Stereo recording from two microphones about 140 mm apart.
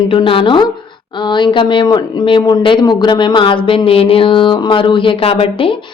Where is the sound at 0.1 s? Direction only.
40° left (ahead or behind).